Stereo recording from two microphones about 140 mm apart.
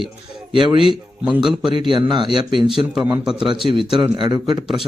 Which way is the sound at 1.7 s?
35° right (ahead or behind).